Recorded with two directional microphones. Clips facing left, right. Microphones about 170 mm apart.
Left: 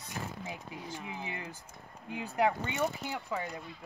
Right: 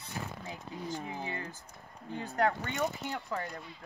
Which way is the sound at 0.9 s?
40° right (ahead or behind).